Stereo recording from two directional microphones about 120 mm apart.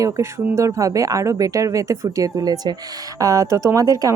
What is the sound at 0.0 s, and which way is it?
Speech, 25° right (ahead or behind).